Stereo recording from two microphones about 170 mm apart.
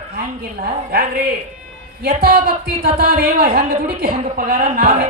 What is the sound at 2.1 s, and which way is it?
A woman's voice, 65° right (ahead or behind).